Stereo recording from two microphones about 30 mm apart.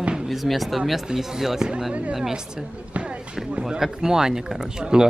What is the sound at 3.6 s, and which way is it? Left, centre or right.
Speech, centre.